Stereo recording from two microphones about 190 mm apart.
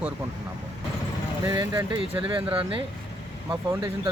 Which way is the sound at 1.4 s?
25° right (ahead or behind).